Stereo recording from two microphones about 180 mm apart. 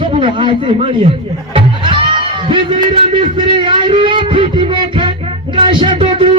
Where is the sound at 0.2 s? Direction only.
30° right (ahead or behind).